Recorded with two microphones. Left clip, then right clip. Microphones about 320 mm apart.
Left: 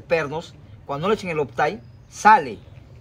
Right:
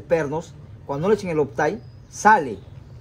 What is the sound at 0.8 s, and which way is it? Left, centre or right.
Speech, centre.